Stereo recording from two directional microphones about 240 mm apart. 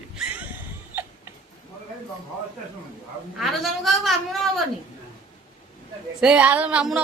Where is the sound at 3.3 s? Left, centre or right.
Centre.